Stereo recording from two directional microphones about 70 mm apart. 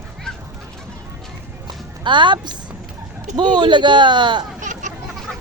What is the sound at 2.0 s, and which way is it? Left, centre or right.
A man's voice, right.